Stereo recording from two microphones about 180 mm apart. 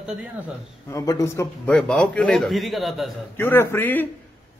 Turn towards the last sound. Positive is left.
turn(degrees=10)  # may be behind; listen again after turning